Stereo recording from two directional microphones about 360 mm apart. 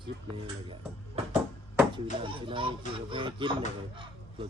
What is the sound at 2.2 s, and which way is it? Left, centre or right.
Speech, centre.